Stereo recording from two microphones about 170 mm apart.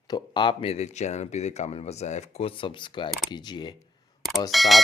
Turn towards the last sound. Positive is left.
turn(degrees=0)  # may be behind; listen again after turning